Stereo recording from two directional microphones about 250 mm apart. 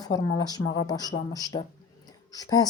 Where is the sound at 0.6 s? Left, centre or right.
Left.